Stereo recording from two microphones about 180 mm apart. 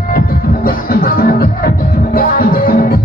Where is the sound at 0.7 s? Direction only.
55° left (ahead or behind).